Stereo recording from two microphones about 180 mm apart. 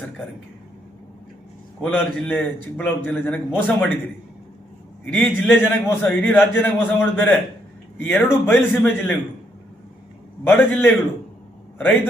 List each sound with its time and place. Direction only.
1.8 s a man's voice: 5° left (ahead or behind)
5.0 s a man's voice: 5° left (ahead or behind)
10.4 s a man's voice: 10° left (ahead or behind)